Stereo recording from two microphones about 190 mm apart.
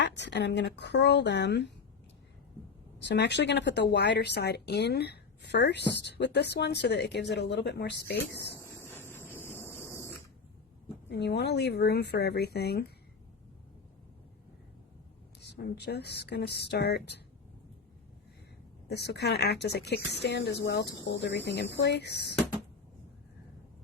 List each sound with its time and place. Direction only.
0.2 s speech: 65° left (ahead or behind)
3.0 s speech: 65° left (ahead or behind)
9.0 s a sound: 10° left (ahead or behind)
11.1 s speech: 60° left (ahead or behind)
15.4 s a sound: 60° left (ahead or behind)
15.8 s speech: 60° left (ahead or behind)
18.9 s speech: 60° left (ahead or behind)